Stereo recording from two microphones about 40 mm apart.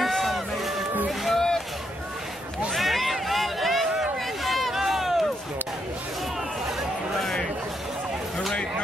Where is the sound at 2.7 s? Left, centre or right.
Centre.